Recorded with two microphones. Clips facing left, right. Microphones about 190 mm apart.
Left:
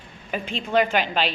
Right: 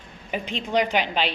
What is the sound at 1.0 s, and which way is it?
Speech, 40° left (ahead or behind).